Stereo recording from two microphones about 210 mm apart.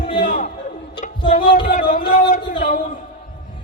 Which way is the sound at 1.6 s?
40° left (ahead or behind).